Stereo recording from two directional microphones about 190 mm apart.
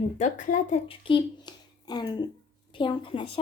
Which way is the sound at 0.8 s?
25° left (ahead or behind).